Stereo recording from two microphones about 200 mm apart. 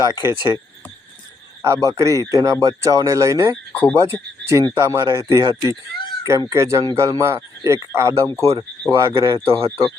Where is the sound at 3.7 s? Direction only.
10° left (ahead or behind).